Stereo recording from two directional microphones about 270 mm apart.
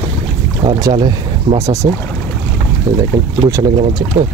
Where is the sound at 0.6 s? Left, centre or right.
Centre.